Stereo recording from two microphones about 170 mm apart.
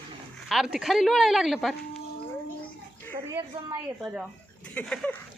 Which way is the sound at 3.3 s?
15° right (ahead or behind).